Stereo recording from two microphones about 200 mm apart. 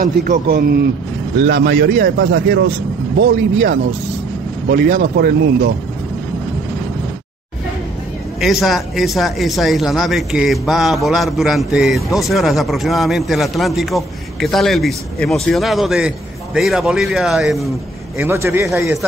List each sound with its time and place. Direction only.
0.0 s a man's voice: 45° right (ahead or behind)
8.4 s a man's voice: centre (ahead or behind)
18.1 s a man's voice: 15° right (ahead or behind)